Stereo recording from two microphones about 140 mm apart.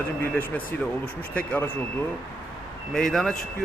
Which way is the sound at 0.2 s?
15° left (ahead or behind).